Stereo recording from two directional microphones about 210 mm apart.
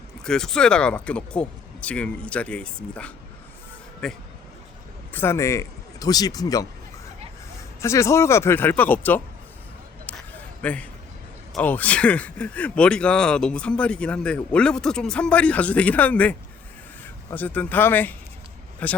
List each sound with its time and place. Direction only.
0.3 s speech: 5° left (ahead or behind)
7.8 s speech: 15° left (ahead or behind)
10.1 s a sound: 10° left (ahead or behind)
10.6 s a man's voice: 5° left (ahead or behind)
17.3 s speech: 5° left (ahead or behind)